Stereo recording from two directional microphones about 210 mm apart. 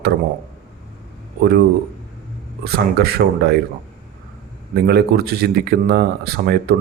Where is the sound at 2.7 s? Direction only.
50° right (ahead or behind).